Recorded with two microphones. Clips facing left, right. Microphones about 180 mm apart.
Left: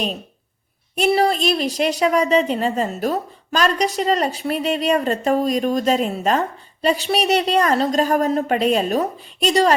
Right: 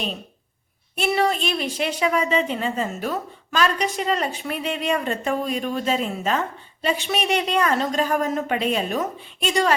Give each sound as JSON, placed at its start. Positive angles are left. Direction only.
{"t": 0.9, "sound": "a woman's voice", "side_deg": 35}